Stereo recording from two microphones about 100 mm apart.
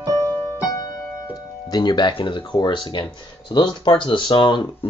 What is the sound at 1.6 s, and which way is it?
Speech, 45° left (ahead or behind).